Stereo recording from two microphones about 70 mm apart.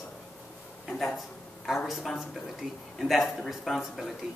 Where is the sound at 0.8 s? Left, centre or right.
Centre.